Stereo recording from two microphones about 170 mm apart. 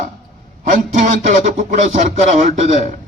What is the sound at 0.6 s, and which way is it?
A man's voice, 45° right (ahead or behind).